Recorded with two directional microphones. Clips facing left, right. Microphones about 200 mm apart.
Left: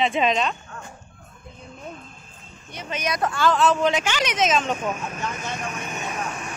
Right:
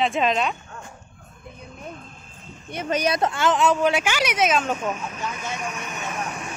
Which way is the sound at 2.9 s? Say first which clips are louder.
Right 3 dB; 30° right (ahead or behind).